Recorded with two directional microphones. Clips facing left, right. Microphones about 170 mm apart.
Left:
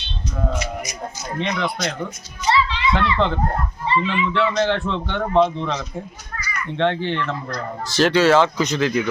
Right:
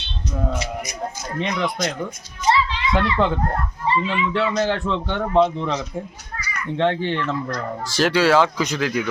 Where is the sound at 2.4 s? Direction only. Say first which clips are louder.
Even; 45° right (ahead or behind).